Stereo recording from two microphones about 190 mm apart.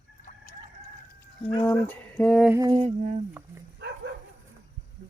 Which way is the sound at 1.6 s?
5° left (ahead or behind).